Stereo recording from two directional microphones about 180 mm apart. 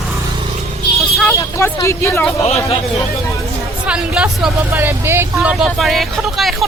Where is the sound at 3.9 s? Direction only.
5° right (ahead or behind).